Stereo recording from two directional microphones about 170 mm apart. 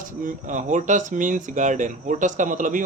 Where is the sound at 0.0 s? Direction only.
50° right (ahead or behind).